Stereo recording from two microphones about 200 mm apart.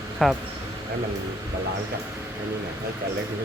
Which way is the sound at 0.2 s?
Centre (ahead or behind).